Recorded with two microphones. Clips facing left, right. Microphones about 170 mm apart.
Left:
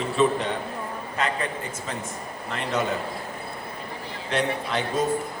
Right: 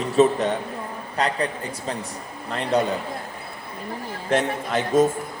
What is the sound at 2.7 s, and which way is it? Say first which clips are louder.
Speech: right 5 dB; 35° right (ahead or behind).